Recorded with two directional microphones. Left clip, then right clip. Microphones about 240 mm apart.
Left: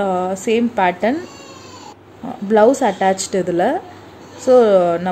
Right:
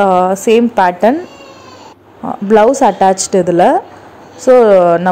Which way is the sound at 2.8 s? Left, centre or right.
Centre.